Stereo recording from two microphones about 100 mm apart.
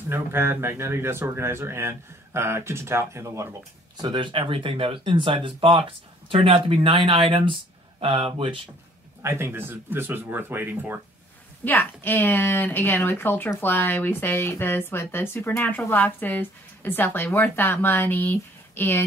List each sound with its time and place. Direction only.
0.1 s speech: 25° right (ahead or behind)
3.9 s speech: 50° right (ahead or behind)
9.2 s speech: 25° right (ahead or behind)
11.6 s speech: 20° left (ahead or behind)